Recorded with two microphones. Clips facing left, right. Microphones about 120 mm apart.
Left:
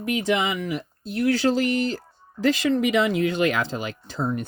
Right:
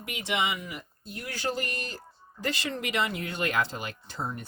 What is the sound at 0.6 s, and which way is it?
Speech, 90° left.